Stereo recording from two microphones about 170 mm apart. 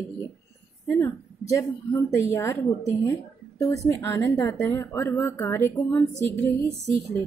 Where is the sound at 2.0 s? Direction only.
15° left (ahead or behind).